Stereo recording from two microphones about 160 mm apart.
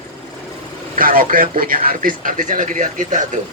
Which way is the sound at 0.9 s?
60° right (ahead or behind).